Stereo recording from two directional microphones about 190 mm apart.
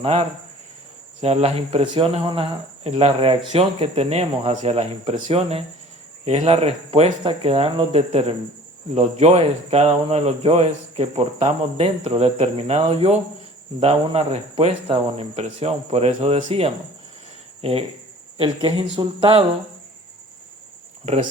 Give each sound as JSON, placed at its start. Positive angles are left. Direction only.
{"t": 0.0, "sound": "speech", "side_deg": -30}